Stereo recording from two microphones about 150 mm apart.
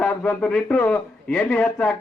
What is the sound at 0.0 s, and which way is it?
Speech, 5° left (ahead or behind).